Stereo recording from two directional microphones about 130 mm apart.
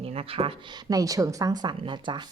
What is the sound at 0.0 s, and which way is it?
Speech, 50° right (ahead or behind).